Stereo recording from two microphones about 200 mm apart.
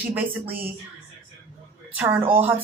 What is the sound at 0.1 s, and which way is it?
Speech, 10° right (ahead or behind).